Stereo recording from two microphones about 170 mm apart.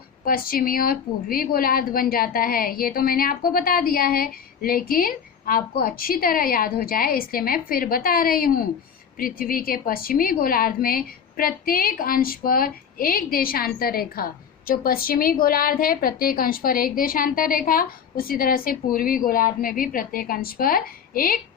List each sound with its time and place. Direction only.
0.3 s a woman's voice: 60° left (ahead or behind)